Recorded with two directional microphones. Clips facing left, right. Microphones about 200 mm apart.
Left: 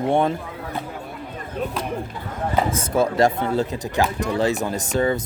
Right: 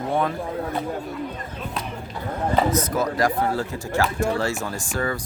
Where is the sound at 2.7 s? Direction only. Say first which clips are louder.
Left 1 dB; 25° left (ahead or behind).